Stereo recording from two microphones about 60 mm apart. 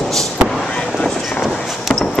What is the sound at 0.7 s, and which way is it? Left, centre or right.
Vehicle, centre.